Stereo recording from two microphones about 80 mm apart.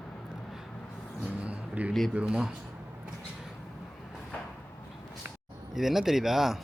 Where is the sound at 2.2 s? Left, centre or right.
Centre.